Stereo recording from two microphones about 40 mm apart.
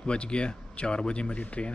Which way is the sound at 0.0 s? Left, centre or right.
Left.